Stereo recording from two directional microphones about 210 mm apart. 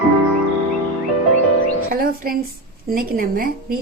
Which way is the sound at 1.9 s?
45° right (ahead or behind).